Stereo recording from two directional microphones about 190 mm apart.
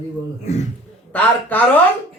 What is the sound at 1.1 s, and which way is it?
Speech, 10° left (ahead or behind).